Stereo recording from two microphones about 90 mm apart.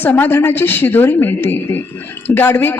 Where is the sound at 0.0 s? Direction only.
20° left (ahead or behind).